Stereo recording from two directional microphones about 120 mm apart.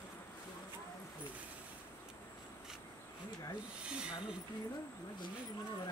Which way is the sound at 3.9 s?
10° right (ahead or behind).